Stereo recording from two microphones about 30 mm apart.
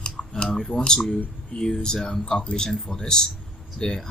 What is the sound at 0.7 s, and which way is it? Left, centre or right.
Speech, left.